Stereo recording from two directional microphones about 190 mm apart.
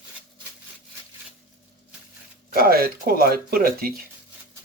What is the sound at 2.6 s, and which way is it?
Speech, 50° right (ahead or behind).